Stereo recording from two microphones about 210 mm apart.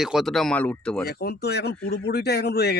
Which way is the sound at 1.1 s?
50° left (ahead or behind).